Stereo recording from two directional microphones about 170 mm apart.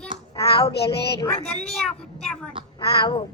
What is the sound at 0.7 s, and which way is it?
Speech, 75° left (ahead or behind).